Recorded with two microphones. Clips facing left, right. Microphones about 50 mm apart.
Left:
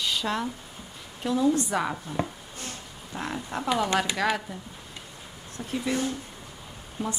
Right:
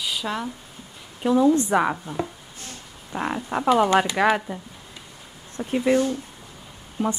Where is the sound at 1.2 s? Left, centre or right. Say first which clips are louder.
Right 6 dB; right.